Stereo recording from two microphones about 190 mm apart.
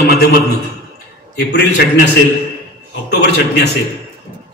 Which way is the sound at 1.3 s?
65° left (ahead or behind).